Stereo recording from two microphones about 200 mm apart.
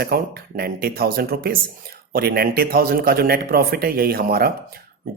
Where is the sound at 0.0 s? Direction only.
50° right (ahead or behind).